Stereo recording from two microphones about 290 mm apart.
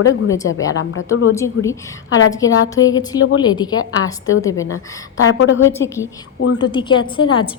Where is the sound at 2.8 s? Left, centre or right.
Left.